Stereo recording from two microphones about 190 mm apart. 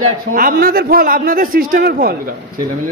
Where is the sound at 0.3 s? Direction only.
45° right (ahead or behind).